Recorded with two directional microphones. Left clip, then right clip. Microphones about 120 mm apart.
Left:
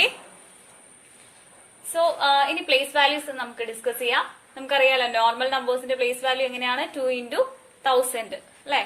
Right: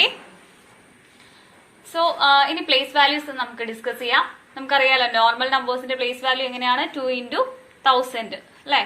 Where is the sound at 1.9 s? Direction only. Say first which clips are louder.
Right 3 dB; 45° left (ahead or behind).